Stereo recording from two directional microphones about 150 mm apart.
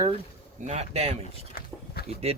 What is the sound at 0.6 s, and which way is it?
Speech, 50° right (ahead or behind).